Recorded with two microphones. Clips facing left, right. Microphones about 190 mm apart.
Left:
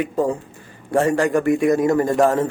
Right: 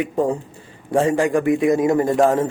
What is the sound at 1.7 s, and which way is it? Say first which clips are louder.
Speech: even; 20° right (ahead or behind).